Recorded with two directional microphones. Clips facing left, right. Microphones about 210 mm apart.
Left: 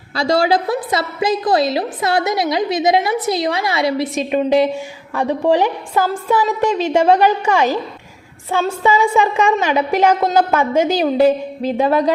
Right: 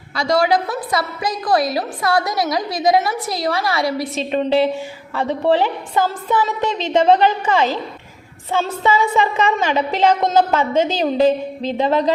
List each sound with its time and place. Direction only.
0.2 s a woman's voice: 30° left (ahead or behind); by 12.1 s 10° left (ahead or behind)